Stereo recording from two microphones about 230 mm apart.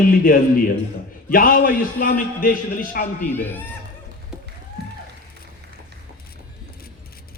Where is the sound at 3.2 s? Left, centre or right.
Centre.